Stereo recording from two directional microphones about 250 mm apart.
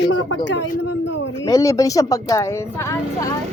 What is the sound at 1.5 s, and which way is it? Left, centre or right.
Speech, centre.